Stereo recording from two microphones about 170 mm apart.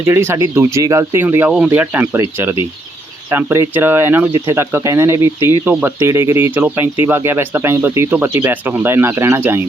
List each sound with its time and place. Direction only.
0.0 s speech: 15° right (ahead or behind)
3.2 s speech: 15° right (ahead or behind)